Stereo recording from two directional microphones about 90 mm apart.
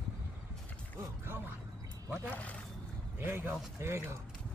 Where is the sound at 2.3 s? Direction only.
15° left (ahead or behind).